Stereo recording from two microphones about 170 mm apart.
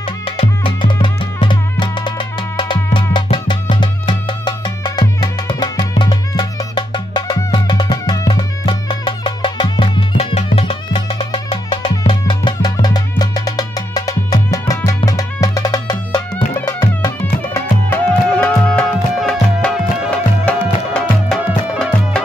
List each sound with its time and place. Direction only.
0.2 s music: 30° left (ahead or behind)
17.6 s music: 10° left (ahead or behind)